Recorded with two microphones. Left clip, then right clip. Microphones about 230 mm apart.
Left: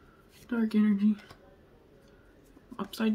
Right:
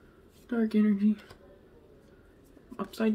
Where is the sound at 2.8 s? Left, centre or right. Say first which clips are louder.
Right 2 dB; centre.